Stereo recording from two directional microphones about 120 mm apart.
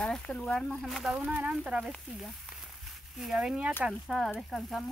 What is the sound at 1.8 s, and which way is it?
Sizzle, centre (ahead or behind).